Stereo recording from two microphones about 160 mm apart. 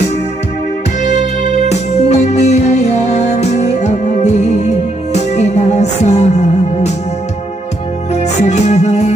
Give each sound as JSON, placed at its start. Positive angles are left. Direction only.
{"t": 1.7, "sound": "music", "side_deg": 45}
{"t": 8.1, "sound": "music", "side_deg": 45}